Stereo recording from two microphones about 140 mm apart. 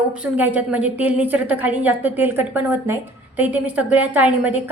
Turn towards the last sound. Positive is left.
turn(degrees=-10)  # may be behind; listen again after turning